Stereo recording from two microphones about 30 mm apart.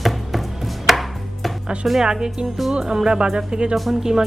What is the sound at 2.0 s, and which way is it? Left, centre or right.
A woman's voice, right.